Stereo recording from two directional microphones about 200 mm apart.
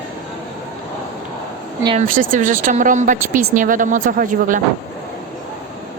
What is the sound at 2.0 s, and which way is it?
A woman's voice, 40° right (ahead or behind).